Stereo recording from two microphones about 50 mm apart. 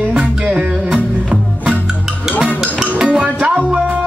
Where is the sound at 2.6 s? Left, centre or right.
Centre.